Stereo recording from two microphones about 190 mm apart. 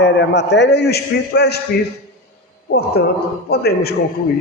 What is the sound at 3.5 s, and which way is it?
Speech, 55° left (ahead or behind).